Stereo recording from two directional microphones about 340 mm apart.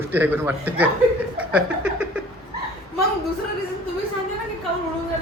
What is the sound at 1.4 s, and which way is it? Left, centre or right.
Chuckle, centre.